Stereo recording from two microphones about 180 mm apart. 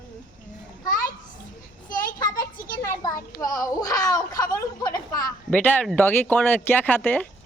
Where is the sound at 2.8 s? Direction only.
20° left (ahead or behind).